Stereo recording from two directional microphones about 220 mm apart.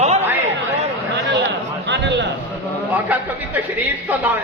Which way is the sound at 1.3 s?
55° right (ahead or behind).